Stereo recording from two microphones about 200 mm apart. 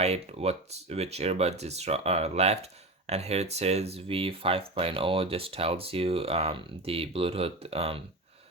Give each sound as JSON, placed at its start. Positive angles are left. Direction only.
{"t": 0.0, "sound": "speech", "side_deg": -30}